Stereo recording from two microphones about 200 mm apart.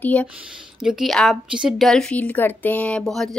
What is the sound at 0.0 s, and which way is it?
A woman's voice, 10° left (ahead or behind).